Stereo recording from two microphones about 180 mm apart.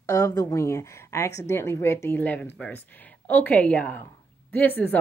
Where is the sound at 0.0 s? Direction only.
20° left (ahead or behind).